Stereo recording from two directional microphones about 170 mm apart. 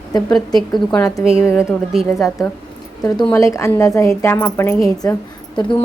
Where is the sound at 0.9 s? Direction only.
15° left (ahead or behind).